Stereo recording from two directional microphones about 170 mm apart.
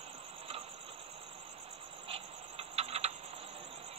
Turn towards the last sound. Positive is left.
turn(degrees=-35)  # may be behind; listen again after turning